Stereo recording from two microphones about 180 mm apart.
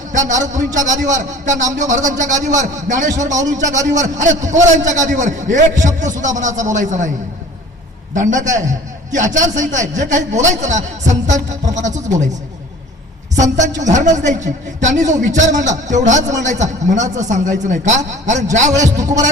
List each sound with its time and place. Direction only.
0.3 s a man's voice: 45° right (ahead or behind)
8.3 s a man's voice: 45° right (ahead or behind)
13.3 s a man's voice: 40° right (ahead or behind)
18.9 s a man's voice: 20° right (ahead or behind)